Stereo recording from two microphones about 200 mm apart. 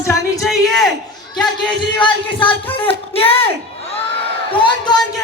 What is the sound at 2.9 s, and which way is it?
Speech, 30° left (ahead or behind).